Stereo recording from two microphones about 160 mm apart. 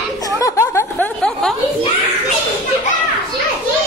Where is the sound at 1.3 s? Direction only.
5° left (ahead or behind).